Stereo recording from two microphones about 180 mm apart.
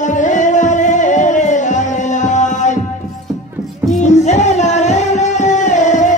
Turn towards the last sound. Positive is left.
turn(degrees=45)  # may be behind; listen again after turning